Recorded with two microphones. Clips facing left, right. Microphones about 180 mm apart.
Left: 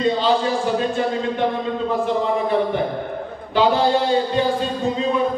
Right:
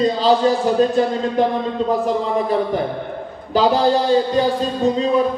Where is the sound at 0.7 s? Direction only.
40° right (ahead or behind).